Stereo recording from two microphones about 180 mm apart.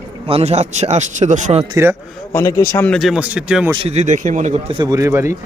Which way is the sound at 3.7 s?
35° right (ahead or behind).